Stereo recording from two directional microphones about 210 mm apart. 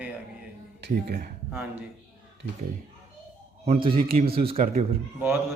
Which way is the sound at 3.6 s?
25° right (ahead or behind).